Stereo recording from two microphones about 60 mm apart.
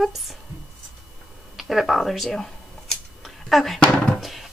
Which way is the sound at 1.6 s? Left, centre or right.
Centre.